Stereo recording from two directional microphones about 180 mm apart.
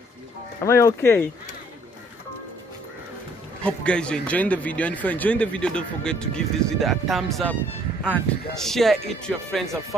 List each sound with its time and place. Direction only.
0.7 s speech: 15° left (ahead or behind)
3.6 s speech: 5° left (ahead or behind)